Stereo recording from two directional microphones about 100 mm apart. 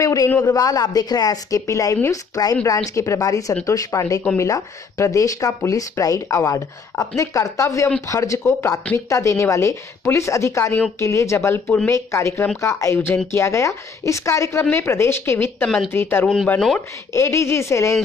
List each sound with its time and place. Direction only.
0.0 s a sound: 35° left (ahead or behind)
0.4 s speech: 35° left (ahead or behind)
11.6 s speech: 15° left (ahead or behind)
11.9 s speech: 30° left (ahead or behind)
15.6 s a woman's voice: 5° left (ahead or behind)
15.9 s speech: 20° left (ahead or behind)